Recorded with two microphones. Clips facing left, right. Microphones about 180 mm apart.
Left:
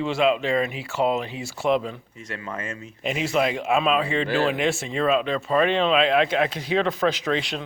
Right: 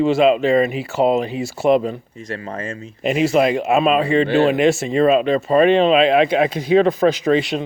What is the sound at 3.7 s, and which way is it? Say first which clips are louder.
Speech: right 6 dB; 50° right (ahead or behind).